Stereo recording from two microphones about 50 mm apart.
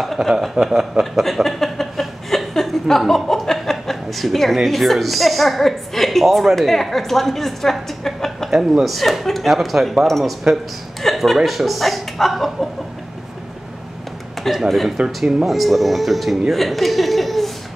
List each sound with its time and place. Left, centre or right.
0.0 s speech: centre
1.2 s a sound: centre
4.6 s speech: centre
8.5 s speech: centre
11.0 s a sound: centre
11.3 s speech: centre
14.5 s speech: centre
15.0 s speech: right
15.4 s speech: centre